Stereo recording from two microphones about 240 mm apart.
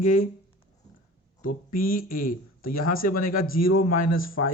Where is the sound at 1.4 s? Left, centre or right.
Left.